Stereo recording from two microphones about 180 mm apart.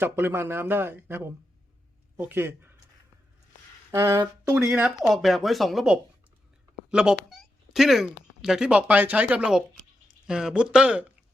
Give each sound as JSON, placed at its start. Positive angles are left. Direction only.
{"t": 0.0, "sound": "speech", "side_deg": -10}
{"t": 3.9, "sound": "a sound", "side_deg": -20}
{"t": 4.5, "sound": "speech", "side_deg": -5}